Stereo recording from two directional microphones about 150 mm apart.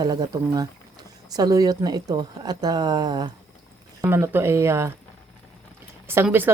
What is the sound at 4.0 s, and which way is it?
Speech, 15° right (ahead or behind).